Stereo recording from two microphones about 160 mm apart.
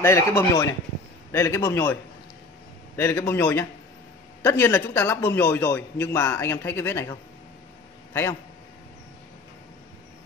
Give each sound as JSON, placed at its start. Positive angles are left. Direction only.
{"t": 0.0, "sound": "a man's voice", "side_deg": 15}
{"t": 3.0, "sound": "a man's voice", "side_deg": 15}